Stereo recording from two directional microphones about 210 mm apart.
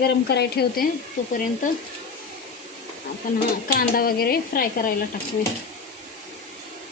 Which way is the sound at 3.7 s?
45° left (ahead or behind).